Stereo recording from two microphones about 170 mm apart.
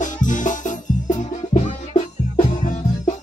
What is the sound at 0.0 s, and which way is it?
Music, 50° left (ahead or behind).